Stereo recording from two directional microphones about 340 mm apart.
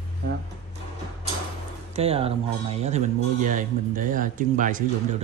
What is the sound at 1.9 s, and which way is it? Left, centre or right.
Speech, centre.